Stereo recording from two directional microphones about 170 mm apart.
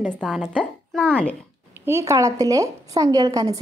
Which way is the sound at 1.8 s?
15° right (ahead or behind).